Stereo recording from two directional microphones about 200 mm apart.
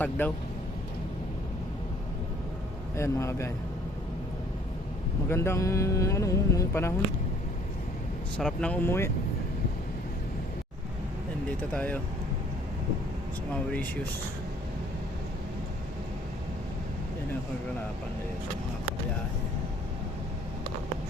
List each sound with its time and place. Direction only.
0.2 s speech: 10° left (ahead or behind)
2.9 s speech: 15° left (ahead or behind)
5.3 s speech: 15° left (ahead or behind)
8.4 s speech: 5° left (ahead or behind)
11.7 s speech: 5° left (ahead or behind)